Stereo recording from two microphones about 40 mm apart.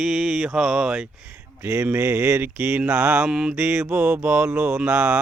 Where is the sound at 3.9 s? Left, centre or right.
Right.